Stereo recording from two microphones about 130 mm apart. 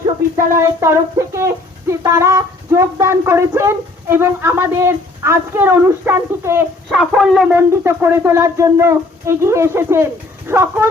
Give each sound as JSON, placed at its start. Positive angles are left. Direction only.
{"t": 0.3, "sound": "speech", "side_deg": -25}
{"t": 6.9, "sound": "a sound", "side_deg": -5}
{"t": 7.5, "sound": "speech", "side_deg": -20}